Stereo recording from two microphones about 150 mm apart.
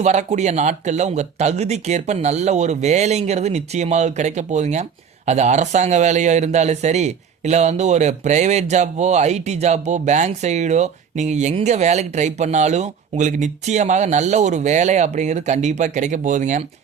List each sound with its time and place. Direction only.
0.0 s speech: 50° right (ahead or behind)